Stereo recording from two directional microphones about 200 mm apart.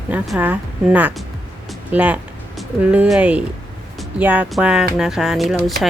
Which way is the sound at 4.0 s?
5° right (ahead or behind).